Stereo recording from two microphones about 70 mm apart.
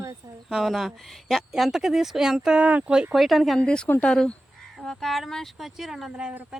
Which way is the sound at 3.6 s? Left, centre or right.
Centre.